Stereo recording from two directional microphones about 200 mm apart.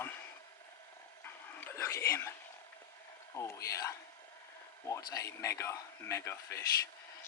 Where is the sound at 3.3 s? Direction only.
15° left (ahead or behind).